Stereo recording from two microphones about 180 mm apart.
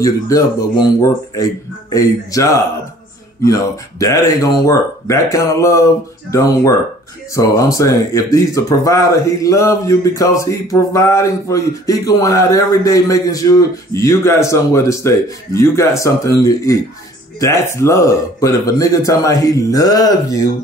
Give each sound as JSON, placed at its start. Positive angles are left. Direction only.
{"t": 0.0, "sound": "speech", "side_deg": 20}